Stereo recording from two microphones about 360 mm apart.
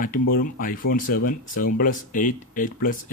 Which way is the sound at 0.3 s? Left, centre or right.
Left.